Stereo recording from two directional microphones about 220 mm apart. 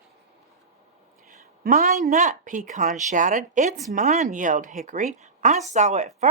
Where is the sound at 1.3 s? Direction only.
40° right (ahead or behind).